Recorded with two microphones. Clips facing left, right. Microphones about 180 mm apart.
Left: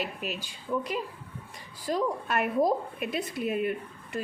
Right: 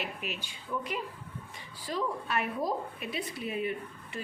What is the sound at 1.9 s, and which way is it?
Speech, 50° left (ahead or behind).